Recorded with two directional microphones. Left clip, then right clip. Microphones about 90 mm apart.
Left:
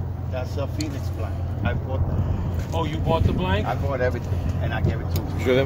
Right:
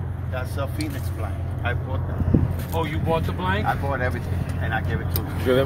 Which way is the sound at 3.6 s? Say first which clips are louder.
Even; 60° left (ahead or behind).